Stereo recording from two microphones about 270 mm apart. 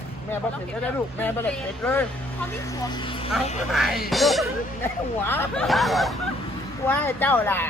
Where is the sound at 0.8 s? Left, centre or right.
Centre.